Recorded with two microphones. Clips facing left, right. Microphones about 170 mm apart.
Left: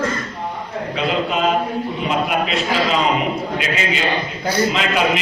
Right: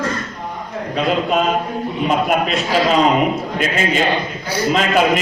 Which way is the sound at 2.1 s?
45° right (ahead or behind).